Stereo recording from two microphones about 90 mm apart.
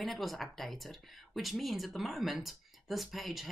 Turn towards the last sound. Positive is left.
turn(degrees=0)  # may be behind; listen again after turning